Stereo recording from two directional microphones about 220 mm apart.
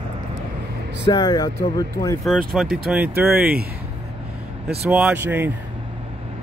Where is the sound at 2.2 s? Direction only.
Centre (ahead or behind).